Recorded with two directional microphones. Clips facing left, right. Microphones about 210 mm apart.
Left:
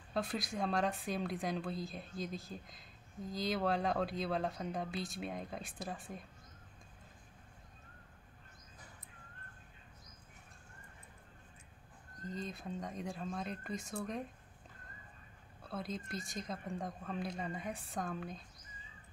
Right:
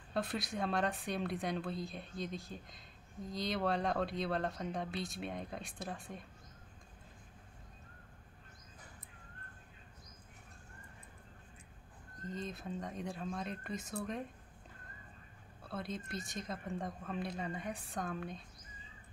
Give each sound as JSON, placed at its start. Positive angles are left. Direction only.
{"t": 0.1, "sound": "speech", "side_deg": 0}
{"t": 12.3, "sound": "speech", "side_deg": 0}
{"t": 15.7, "sound": "speech", "side_deg": 0}